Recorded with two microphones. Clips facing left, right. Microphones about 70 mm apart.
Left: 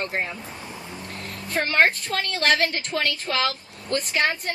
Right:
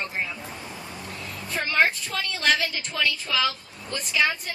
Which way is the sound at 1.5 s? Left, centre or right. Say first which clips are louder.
Left 3 dB; left.